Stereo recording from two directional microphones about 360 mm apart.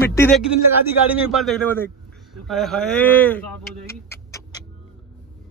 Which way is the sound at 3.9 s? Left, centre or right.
Centre.